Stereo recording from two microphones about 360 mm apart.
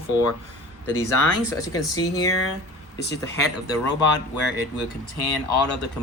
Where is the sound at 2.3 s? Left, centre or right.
Left.